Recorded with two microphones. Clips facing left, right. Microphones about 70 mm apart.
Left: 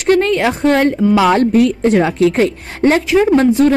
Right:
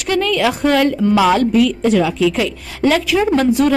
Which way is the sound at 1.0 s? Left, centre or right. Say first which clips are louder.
Left 2 dB; centre.